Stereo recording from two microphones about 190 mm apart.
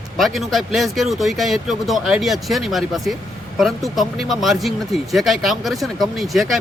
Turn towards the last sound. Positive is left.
turn(degrees=0)  # may be behind; listen again after turning